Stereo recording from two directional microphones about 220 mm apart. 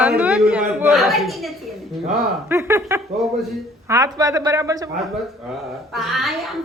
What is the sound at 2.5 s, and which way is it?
Speech, 10° right (ahead or behind).